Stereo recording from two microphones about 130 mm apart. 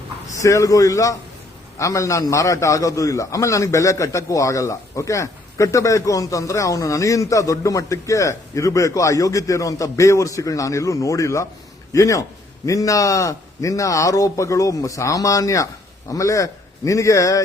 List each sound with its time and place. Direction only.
0.4 s a man's voice: 25° left (ahead or behind)